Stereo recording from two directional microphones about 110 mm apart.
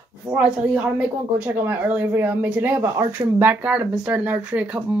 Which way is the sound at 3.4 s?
15° right (ahead or behind).